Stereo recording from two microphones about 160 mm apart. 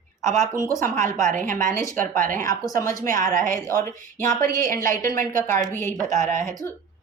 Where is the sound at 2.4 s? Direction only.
20° left (ahead or behind).